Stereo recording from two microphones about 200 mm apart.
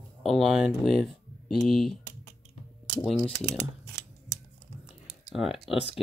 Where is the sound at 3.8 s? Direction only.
55° right (ahead or behind).